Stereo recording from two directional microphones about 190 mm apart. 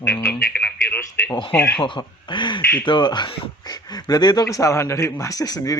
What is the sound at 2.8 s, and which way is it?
Speech, 25° left (ahead or behind).